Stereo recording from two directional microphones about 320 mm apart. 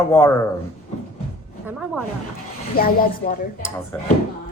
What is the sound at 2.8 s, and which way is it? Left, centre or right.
Speech, left.